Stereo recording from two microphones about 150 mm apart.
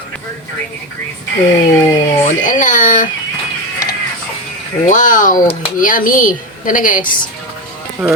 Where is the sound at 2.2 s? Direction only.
60° left (ahead or behind).